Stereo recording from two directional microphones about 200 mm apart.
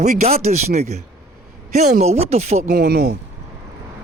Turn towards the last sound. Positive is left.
turn(degrees=-55)  # may be behind; listen again after turning